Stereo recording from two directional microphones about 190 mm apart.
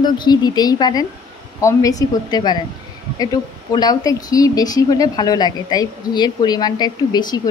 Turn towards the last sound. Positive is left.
turn(degrees=20)  # may be behind; listen again after turning